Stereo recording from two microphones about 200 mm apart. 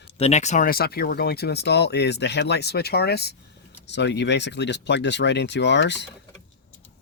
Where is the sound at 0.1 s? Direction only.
30° left (ahead or behind); by 6.1 s 60° left (ahead or behind).